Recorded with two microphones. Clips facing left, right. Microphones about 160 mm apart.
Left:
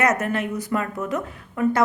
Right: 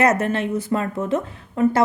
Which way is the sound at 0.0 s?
30° right (ahead or behind).